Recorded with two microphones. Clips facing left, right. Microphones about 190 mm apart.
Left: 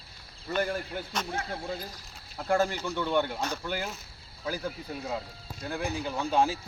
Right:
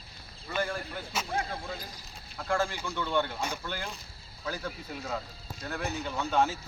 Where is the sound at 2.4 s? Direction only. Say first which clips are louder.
Left 4 dB; 20° left (ahead or behind).